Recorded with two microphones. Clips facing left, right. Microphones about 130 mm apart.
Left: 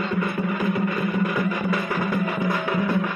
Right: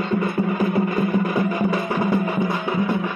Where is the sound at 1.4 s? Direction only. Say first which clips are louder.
Right 3 dB; 35° right (ahead or behind).